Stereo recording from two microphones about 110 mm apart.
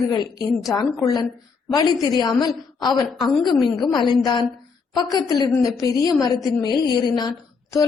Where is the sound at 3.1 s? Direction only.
Centre (ahead or behind).